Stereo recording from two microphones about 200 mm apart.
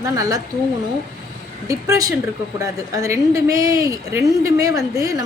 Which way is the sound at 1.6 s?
15° right (ahead or behind).